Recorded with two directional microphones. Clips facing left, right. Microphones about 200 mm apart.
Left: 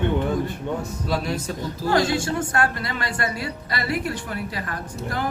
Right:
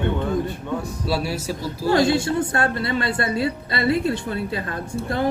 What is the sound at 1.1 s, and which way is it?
Speech, 10° right (ahead or behind).